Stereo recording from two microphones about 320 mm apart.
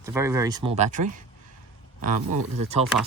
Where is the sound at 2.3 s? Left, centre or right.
Centre.